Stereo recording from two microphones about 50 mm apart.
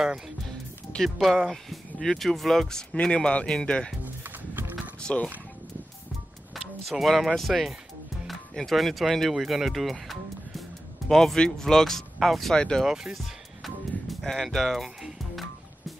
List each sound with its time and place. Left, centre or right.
0.5 s music: centre
1.1 s speech: centre
4.0 s music: right
5.0 s speech: centre
6.5 s speech: centre
12.5 s speech: centre
12.8 s speech: centre
13.1 s music: centre
14.2 s speech: centre
15.0 s music: centre